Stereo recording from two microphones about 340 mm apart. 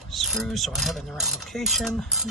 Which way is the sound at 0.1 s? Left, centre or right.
Centre.